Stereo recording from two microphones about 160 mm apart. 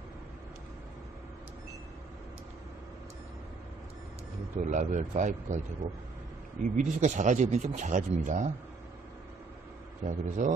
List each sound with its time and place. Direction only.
4.6 s speech: 50° right (ahead or behind)
6.6 s speech: 50° right (ahead or behind)
10.0 s speech: 55° right (ahead or behind)